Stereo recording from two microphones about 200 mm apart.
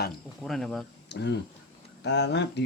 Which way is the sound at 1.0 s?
60° left (ahead or behind).